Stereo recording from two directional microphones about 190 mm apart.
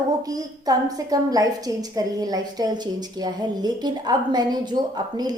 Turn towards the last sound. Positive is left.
turn(degrees=-20)  # may be behind; listen again after turning